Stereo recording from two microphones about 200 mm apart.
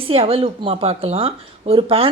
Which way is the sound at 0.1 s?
30° right (ahead or behind).